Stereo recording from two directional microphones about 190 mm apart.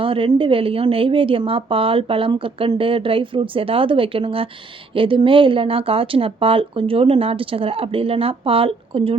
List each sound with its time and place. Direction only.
0.0 s a woman's voice: 30° right (ahead or behind)